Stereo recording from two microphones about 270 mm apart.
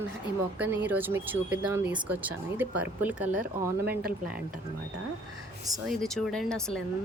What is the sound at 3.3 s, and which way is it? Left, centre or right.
Speech, right.